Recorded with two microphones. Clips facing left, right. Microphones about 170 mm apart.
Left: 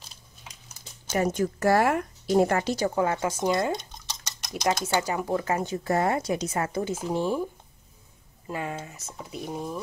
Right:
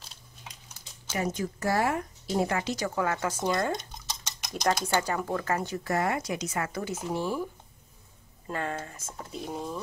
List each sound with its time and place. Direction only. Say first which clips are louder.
1.1 s speech: left 6 dB; 50° left (ahead or behind)
1.6 s speech: left 5 dB; 65° left (ahead or behind); by 2.7 s 50° left (ahead or behind)
2.9 s speech: left 3 dB; 20° left (ahead or behind)
3.3 s speech: left 3 dB; 10° left (ahead or behind)
4.0 s stir: right 1 dB; centre (ahead or behind)
4.8 s speech: left 2 dB; 10° left (ahead or behind)
8.5 s speech: even; 10° left (ahead or behind)